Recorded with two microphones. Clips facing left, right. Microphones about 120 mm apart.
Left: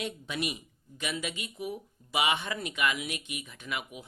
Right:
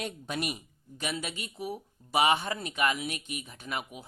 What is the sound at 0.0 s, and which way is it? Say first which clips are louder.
Speech: even; 45° right (ahead or behind).